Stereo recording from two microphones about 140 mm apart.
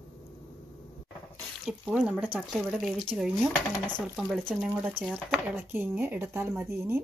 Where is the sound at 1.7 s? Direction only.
5° right (ahead or behind).